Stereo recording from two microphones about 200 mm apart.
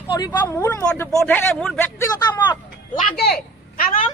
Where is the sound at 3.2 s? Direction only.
50° left (ahead or behind).